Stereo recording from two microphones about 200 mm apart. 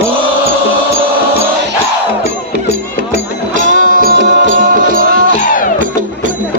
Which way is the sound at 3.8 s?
45° right (ahead or behind).